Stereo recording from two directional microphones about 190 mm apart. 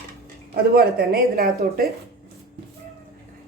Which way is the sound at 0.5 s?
50° right (ahead or behind).